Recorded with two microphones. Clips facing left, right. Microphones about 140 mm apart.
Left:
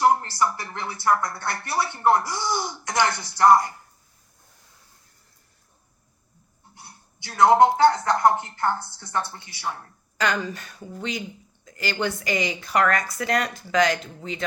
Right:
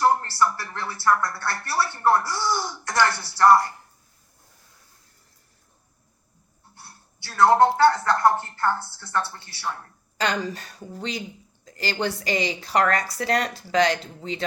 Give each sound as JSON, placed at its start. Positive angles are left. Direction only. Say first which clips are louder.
{"t": 0.0, "sound": "speech", "louder": "even", "side_deg": 15}
{"t": 6.7, "sound": "speech", "louder": "left 1 dB", "side_deg": 15}
{"t": 10.2, "sound": "a woman's voice", "louder": "even", "side_deg": -35}